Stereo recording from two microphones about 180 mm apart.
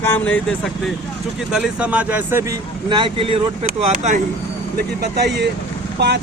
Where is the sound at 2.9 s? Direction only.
25° right (ahead or behind).